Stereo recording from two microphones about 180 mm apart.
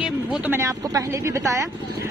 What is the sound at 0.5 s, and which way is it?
Speech, 15° right (ahead or behind).